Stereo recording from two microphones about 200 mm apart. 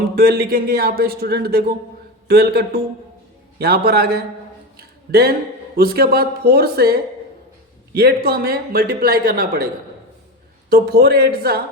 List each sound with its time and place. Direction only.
0.2 s speech: 50° right (ahead or behind)
10.7 s speech: 50° right (ahead or behind)